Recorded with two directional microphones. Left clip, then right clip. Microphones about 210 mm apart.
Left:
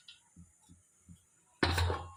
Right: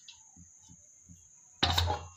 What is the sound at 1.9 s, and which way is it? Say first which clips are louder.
Music: right 4 dB; 20° right (ahead or behind).